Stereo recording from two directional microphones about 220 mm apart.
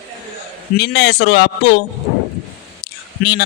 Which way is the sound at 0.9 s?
50° left (ahead or behind).